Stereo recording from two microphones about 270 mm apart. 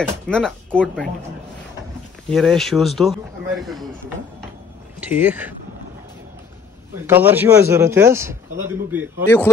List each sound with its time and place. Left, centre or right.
0.0 s speech: centre
2.2 s speech: centre
5.0 s a man's voice: centre
7.1 s a man's voice: centre